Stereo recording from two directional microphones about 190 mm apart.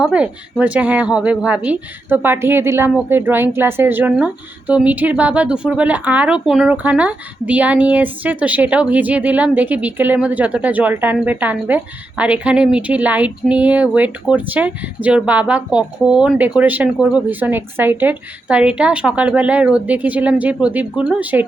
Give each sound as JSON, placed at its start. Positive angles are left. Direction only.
{"t": 0.0, "sound": "a woman's voice", "side_deg": -5}